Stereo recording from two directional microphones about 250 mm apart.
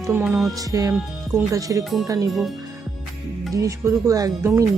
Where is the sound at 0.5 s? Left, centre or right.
Centre.